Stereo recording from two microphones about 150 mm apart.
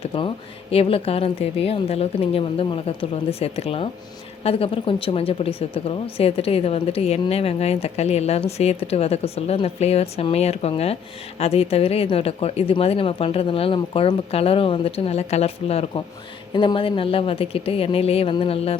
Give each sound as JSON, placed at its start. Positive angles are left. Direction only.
{"t": 0.7, "sound": "speech", "side_deg": 40}